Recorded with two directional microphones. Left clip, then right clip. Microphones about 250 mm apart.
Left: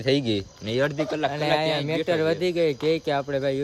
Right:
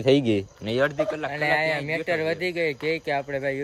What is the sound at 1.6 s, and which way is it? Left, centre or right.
Speech, centre.